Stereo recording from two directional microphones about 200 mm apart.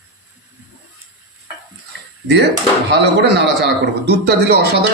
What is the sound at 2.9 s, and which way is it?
A man's voice, 60° right (ahead or behind).